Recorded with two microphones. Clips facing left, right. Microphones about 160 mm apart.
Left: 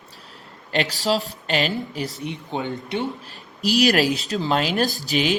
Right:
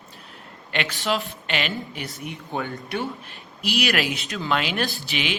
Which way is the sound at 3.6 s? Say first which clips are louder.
Left 6 dB; 40° left (ahead or behind).